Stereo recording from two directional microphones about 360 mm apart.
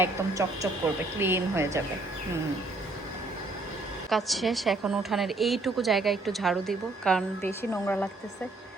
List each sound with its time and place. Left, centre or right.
0.0 s speech: centre
4.1 s a woman's voice: centre